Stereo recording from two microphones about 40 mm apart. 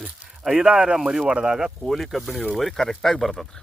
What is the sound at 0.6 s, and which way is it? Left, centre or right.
Speech, right.